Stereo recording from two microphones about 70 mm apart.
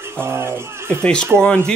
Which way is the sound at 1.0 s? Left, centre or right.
Centre.